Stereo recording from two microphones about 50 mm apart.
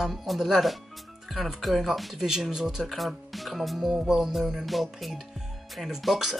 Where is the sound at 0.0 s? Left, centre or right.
Centre.